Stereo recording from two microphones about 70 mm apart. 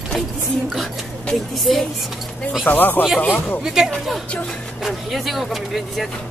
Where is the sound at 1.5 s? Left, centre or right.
Centre.